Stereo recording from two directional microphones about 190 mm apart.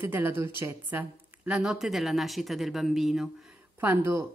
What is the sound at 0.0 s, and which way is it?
Speech, 10° right (ahead or behind).